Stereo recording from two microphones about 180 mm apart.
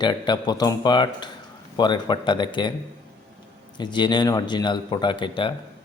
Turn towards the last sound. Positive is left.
turn(degrees=25)  # may be behind; listen again after turning